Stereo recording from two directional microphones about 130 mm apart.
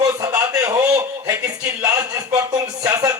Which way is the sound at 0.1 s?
25° right (ahead or behind).